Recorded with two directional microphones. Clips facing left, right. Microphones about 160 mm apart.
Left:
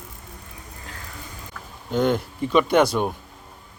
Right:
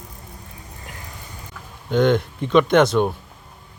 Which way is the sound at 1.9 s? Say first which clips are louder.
Right 4 dB; 5° left (ahead or behind).